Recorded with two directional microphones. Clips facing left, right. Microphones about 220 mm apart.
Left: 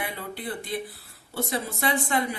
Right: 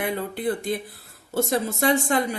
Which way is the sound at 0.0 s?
50° right (ahead or behind).